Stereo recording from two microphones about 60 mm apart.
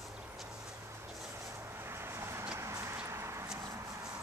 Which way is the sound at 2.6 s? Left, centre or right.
Right.